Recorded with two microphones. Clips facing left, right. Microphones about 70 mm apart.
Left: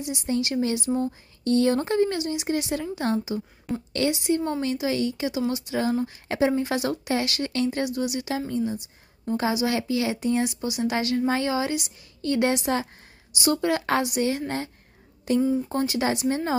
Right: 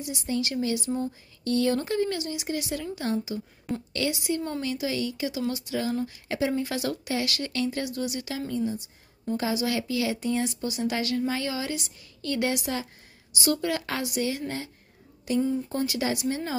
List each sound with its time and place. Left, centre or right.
0.0 s speech: left
3.7 s a woman's voice: centre
4.1 s a woman's voice: left
10.4 s speech: centre; by 14.0 s left
14.0 s speech: left
15.3 s speech: left